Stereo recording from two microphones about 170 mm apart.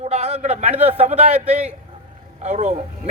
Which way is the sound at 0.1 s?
40° right (ahead or behind).